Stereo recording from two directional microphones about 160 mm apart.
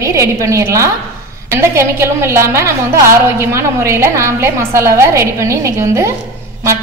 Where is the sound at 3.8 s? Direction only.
15° right (ahead or behind).